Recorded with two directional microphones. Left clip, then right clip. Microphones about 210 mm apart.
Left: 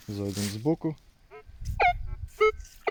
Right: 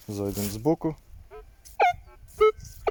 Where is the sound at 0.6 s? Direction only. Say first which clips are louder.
Right 4 dB; 10° right (ahead or behind).